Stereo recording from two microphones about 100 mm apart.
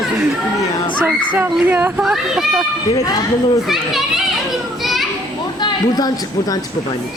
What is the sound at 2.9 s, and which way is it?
Speech, 40° left (ahead or behind).